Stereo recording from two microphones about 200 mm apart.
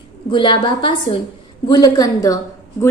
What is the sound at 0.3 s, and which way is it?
A woman's voice, 25° left (ahead or behind).